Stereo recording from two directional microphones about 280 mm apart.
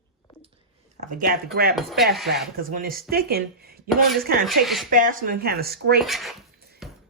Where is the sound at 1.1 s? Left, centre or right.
Right.